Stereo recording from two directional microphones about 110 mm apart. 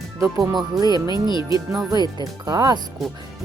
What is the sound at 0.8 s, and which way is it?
Speech, 40° right (ahead or behind).